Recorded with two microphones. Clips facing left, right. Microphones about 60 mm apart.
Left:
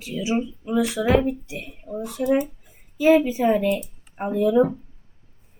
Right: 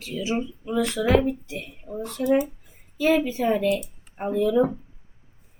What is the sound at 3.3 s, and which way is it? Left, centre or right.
Speech, centre.